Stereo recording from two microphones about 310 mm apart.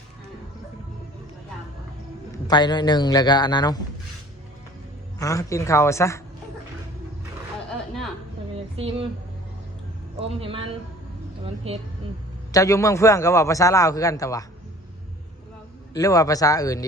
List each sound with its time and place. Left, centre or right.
2.5 s a man's voice: centre
5.2 s a man's voice: centre
8.5 s a sound: centre
10.2 s a man's voice: centre
12.5 s a man's voice: centre
16.0 s a man's voice: centre